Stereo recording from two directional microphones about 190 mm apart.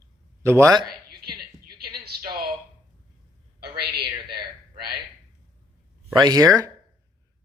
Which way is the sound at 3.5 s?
55° right (ahead or behind).